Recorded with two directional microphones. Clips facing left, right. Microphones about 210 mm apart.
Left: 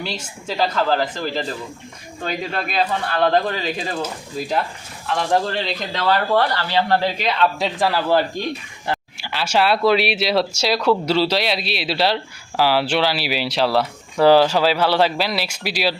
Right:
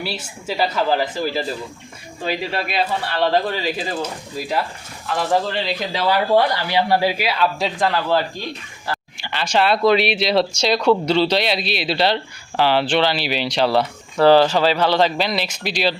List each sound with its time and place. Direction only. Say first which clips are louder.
0.0 s speech: right 1 dB; 10° right (ahead or behind)
8.9 s a sound: left 3 dB; 20° left (ahead or behind)
9.2 s speech: even; 5° left (ahead or behind)